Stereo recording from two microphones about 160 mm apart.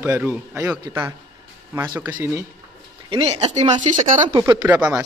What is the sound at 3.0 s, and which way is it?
Speech, 40° right (ahead or behind).